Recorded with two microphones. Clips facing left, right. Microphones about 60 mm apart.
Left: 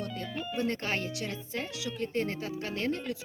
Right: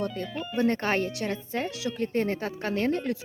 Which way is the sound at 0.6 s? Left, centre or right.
Right.